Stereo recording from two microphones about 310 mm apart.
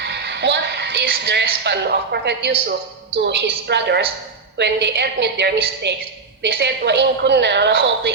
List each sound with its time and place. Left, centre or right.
0.0 s a woman's voice: right